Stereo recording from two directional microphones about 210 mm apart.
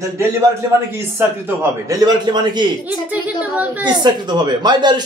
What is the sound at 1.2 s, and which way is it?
A man's voice, 10° right (ahead or behind).